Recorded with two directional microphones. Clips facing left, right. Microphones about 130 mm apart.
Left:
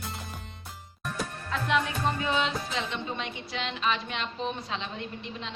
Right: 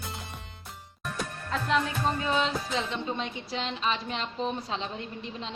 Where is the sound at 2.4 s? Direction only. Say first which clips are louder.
Right 1 dB; 35° right (ahead or behind).